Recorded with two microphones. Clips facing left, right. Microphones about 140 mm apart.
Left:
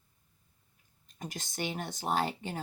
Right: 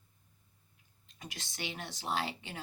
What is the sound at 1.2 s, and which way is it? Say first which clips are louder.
Speech: left 6 dB; 45° left (ahead or behind).